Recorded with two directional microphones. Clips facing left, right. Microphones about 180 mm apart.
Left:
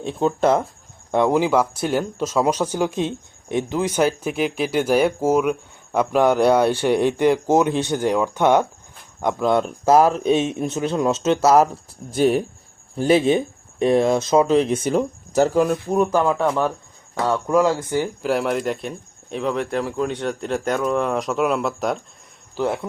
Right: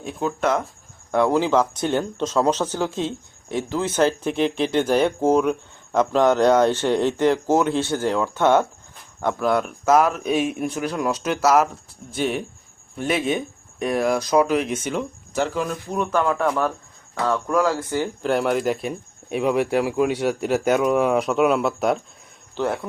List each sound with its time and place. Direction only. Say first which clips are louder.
0.0 s speech: left 4 dB; 30° left (ahead or behind)
1.1 s speech: left 1 dB; 15° left (ahead or behind); by 16.0 s 40° left (ahead or behind)
16.1 s speech: left 2 dB; 10° left (ahead or behind)
17.5 s speech: left 5 dB; 25° left (ahead or behind)
18.2 s speech: even; centre (ahead or behind)
22.5 s speech: left 1 dB; 10° left (ahead or behind)